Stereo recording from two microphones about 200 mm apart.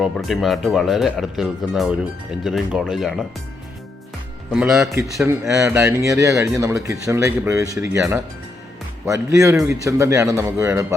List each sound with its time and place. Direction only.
0.0 s speech: centre (ahead or behind)
5.1 s speech: 15° right (ahead or behind)